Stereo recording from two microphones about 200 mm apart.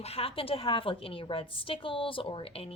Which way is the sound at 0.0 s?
30° left (ahead or behind).